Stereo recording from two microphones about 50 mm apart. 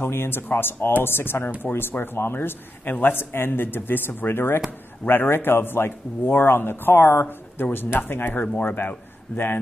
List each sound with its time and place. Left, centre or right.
0.0 s speech: left
9.3 s speech: left